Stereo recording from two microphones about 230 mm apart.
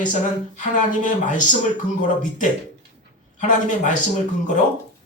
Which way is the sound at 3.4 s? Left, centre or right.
Left.